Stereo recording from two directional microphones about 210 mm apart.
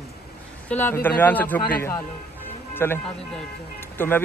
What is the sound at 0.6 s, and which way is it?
A man's voice, 10° left (ahead or behind).